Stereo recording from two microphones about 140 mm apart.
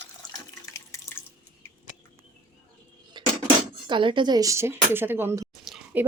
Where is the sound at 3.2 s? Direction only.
35° right (ahead or behind).